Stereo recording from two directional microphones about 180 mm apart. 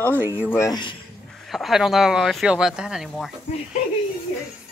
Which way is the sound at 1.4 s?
Centre (ahead or behind).